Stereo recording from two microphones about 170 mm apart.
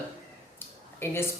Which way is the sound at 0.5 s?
15° left (ahead or behind).